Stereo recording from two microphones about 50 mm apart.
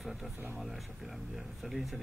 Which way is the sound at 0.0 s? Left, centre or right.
Centre.